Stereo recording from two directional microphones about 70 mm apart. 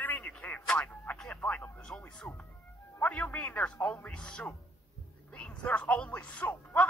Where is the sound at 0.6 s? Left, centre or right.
Centre.